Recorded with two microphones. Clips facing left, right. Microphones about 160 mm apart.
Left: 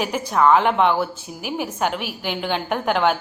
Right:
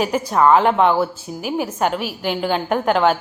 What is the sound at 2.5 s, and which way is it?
Speech, centre (ahead or behind).